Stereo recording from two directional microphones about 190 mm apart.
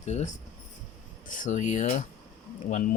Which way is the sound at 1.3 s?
40° left (ahead or behind).